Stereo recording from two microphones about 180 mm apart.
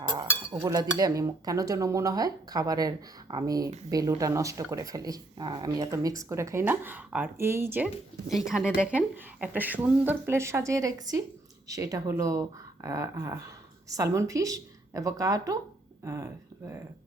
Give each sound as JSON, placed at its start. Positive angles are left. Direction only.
{"t": 0.1, "sound": "speech", "side_deg": -25}
{"t": 8.3, "sound": "speech", "side_deg": 0}